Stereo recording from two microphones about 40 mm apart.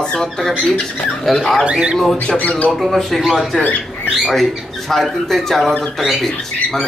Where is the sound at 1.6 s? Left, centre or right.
Right.